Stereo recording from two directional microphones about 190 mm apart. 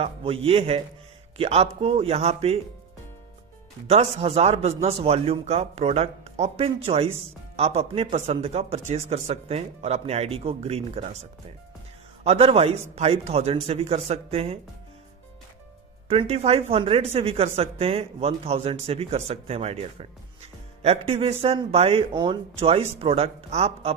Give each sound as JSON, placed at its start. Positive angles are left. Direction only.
{"t": 0.4, "sound": "speech", "side_deg": -30}
{"t": 3.8, "sound": "speech", "side_deg": -35}
{"t": 12.2, "sound": "speech", "side_deg": -30}
{"t": 16.0, "sound": "speech", "side_deg": -30}